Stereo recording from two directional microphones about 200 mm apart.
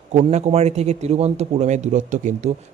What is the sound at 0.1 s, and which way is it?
A man's voice, 35° right (ahead or behind).